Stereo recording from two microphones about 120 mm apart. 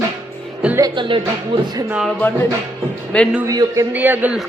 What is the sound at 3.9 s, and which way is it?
Speech, 15° right (ahead or behind).